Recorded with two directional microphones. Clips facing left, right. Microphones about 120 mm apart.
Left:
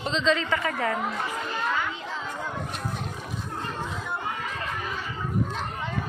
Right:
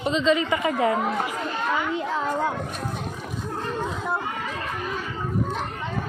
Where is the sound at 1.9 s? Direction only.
60° right (ahead or behind).